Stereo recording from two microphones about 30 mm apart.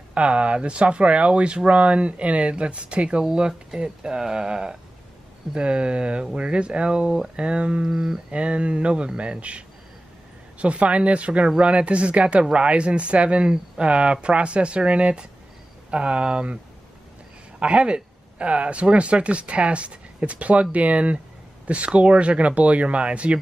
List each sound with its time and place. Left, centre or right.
0.1 s speech: right
3.3 s speech: right
5.5 s speech: right
7.9 s speech: centre
8.3 s speech: right
17.6 s speech: right